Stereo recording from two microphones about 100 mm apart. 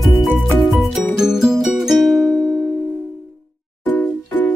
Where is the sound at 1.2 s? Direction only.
5° right (ahead or behind).